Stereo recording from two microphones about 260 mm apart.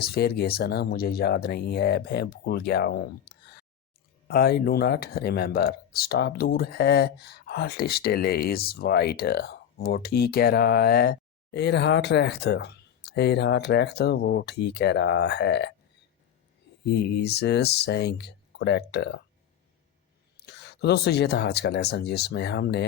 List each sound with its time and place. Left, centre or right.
0.0 s speech: left
16.9 s speech: left
20.3 s speech: left